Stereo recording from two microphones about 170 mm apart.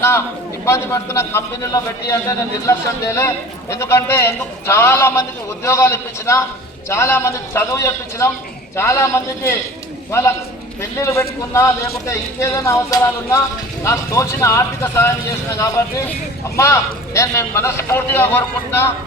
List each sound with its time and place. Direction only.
0.6 s a man's voice: 15° left (ahead or behind)